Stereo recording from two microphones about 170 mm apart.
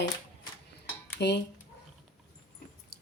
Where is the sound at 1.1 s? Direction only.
75° left (ahead or behind).